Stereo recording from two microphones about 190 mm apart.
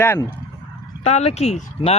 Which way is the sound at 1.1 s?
35° left (ahead or behind).